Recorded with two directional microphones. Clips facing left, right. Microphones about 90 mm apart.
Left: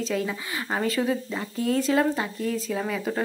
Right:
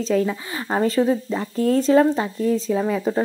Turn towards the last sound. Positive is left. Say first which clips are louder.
# right 7 dB
turn(degrees=-25)  # may be behind; listen again after turning